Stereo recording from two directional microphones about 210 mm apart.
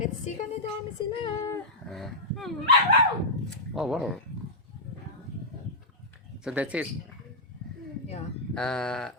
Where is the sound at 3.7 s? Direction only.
Centre (ahead or behind).